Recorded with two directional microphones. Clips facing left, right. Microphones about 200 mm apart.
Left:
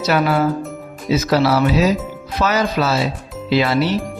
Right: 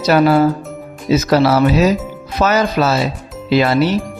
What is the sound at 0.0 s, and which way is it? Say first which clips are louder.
Speech: right 5 dB; 40° right (ahead or behind).